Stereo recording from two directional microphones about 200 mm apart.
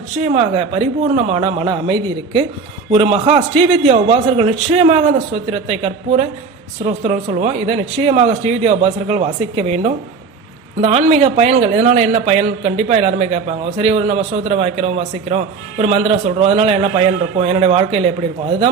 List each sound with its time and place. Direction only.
0.2 s a man's voice: 30° right (ahead or behind)